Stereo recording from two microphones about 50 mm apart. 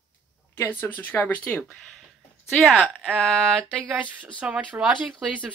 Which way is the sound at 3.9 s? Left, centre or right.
Right.